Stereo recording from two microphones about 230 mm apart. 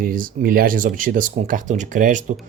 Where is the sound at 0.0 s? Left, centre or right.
Right.